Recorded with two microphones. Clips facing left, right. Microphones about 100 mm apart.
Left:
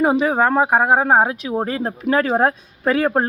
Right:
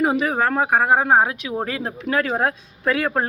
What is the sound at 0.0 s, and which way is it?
Speech, 25° left (ahead or behind).